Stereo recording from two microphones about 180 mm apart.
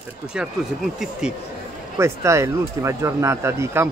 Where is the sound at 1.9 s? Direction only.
15° right (ahead or behind).